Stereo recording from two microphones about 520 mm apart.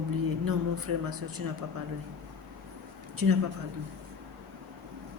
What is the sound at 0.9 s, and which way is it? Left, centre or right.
Speech, right.